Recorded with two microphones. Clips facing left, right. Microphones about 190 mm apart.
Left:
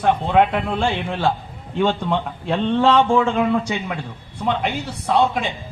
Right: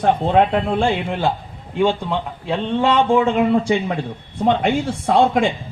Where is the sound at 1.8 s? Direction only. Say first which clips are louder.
Right 1 dB; 10° right (ahead or behind).